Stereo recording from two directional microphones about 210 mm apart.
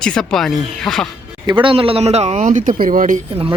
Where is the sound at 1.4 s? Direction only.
25° right (ahead or behind); by 3.2 s 40° right (ahead or behind).